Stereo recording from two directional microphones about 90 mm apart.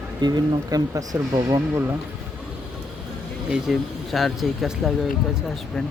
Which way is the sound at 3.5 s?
Centre (ahead or behind).